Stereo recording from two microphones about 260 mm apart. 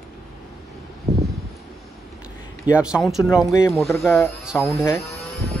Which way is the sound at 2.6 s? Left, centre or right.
Centre.